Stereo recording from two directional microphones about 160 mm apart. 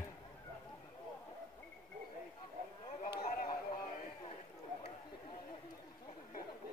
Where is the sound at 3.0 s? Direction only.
65° left (ahead or behind).